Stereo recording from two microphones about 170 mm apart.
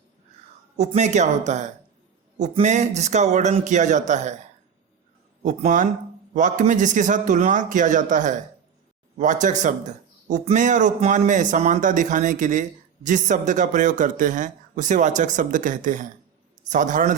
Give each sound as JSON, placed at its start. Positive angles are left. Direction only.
{"t": 0.8, "sound": "a man's voice", "side_deg": -45}
{"t": 5.4, "sound": "a man's voice", "side_deg": -50}